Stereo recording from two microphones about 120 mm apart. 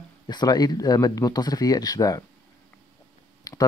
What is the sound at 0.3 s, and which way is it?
Speech, 35° left (ahead or behind).